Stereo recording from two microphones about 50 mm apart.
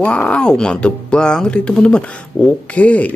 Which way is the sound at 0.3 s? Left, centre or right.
Centre.